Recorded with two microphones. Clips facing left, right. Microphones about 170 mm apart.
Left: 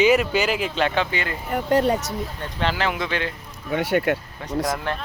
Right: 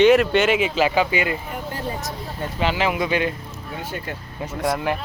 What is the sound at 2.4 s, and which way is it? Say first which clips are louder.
Speech: right 4 dB; 5° right (ahead or behind).